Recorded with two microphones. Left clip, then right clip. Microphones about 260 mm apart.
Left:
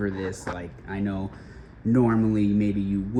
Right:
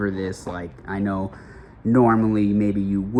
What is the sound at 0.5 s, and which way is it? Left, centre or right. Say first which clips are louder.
Speech: right 4 dB; right.